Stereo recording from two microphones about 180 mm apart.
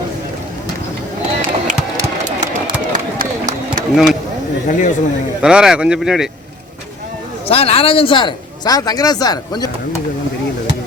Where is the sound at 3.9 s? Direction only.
5° right (ahead or behind).